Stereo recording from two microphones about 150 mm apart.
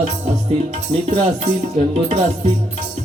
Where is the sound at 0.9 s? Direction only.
35° right (ahead or behind).